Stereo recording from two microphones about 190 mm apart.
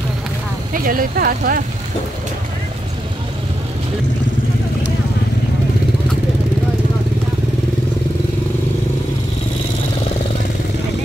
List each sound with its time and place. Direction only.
0.7 s speech: 50° right (ahead or behind)